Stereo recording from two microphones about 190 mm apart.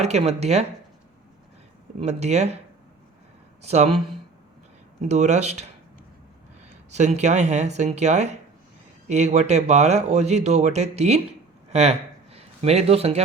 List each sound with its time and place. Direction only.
0.0 s speech: 35° right (ahead or behind)
2.0 s speech: 35° right (ahead or behind)
3.6 s speech: 35° right (ahead or behind)
5.0 s speech: 35° right (ahead or behind)
6.9 s speech: 35° right (ahead or behind)